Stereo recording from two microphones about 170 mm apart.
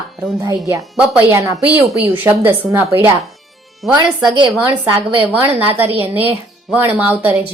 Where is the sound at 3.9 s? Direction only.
25° right (ahead or behind).